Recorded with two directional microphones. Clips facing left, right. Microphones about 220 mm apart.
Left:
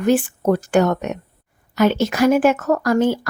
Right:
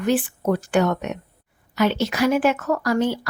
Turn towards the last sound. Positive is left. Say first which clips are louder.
# left 4 dB
turn(degrees=45)  # may be behind; listen again after turning